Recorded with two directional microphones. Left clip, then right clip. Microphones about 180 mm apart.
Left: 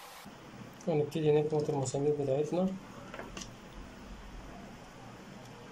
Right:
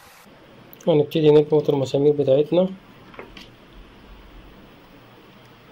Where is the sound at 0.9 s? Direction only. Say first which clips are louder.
Right 13 dB; 50° right (ahead or behind).